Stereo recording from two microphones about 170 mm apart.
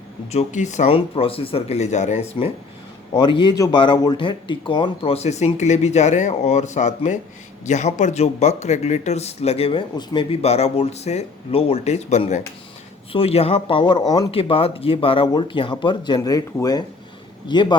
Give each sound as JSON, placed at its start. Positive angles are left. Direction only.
{"t": 0.3, "sound": "speech", "side_deg": 45}
{"t": 3.2, "sound": "speech", "side_deg": 30}
{"t": 10.4, "sound": "speech", "side_deg": 40}